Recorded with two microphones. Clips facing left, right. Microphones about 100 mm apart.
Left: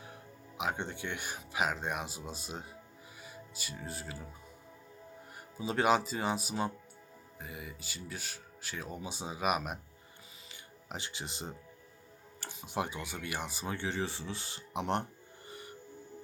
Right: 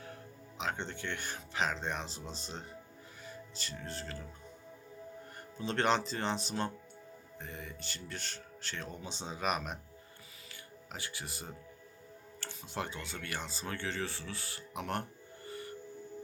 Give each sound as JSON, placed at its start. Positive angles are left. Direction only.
{"t": 0.0, "sound": "speech", "side_deg": 15}
{"t": 5.5, "sound": "speech", "side_deg": 10}
{"t": 15.4, "sound": "music", "side_deg": 20}